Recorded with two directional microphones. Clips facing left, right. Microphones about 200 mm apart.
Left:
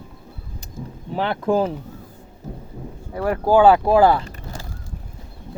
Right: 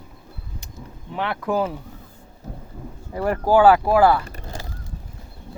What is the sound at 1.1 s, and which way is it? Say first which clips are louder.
Speech: left 3 dB; 30° left (ahead or behind).